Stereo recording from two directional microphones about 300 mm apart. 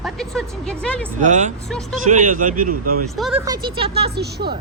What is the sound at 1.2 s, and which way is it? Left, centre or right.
A man's voice, right.